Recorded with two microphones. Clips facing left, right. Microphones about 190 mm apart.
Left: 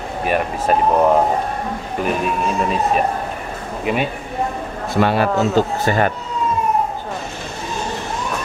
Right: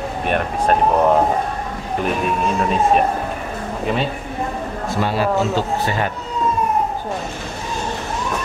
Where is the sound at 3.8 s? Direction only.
10° left (ahead or behind).